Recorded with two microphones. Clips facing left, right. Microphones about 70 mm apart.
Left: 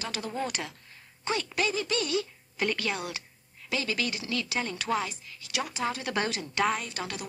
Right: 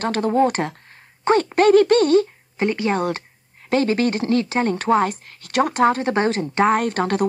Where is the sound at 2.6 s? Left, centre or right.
Right.